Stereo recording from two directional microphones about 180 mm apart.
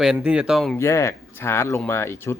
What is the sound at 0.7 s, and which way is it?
Speech, 15° left (ahead or behind).